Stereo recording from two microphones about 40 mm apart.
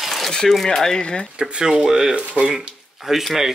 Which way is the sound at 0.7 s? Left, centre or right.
Centre.